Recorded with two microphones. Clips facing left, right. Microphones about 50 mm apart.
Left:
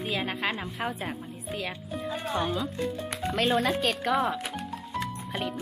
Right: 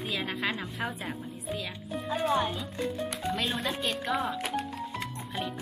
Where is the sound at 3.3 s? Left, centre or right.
Left.